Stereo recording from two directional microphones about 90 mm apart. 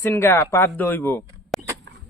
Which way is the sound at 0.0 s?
25° left (ahead or behind).